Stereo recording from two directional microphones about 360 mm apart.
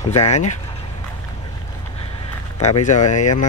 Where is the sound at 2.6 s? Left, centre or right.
Centre.